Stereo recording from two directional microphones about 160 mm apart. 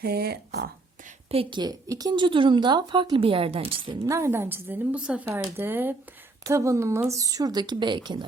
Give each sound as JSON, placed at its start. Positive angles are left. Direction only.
{"t": 0.0, "sound": "speech", "side_deg": -80}
{"t": 1.3, "sound": "a woman's voice", "side_deg": -35}
{"t": 4.0, "sound": "speech", "side_deg": -20}